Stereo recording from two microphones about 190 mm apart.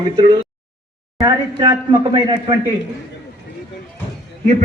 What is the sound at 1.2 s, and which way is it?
Speech, 25° right (ahead or behind).